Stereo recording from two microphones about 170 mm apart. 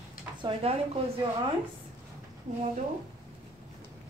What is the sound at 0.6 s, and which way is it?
Speech, 35° right (ahead or behind).